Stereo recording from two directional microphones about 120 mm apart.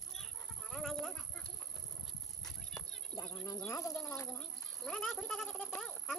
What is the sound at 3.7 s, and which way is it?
Speech, 25° left (ahead or behind).